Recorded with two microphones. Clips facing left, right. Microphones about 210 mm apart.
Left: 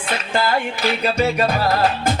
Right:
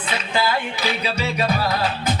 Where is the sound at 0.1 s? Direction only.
50° left (ahead or behind).